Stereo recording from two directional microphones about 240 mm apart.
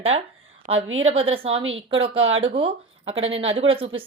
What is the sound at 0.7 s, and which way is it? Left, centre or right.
Speech, right.